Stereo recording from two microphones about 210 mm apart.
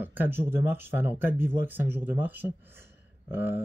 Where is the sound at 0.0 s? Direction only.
10° right (ahead or behind).